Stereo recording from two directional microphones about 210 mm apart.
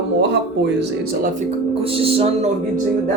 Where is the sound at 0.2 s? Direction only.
55° right (ahead or behind); by 2.8 s 30° right (ahead or behind).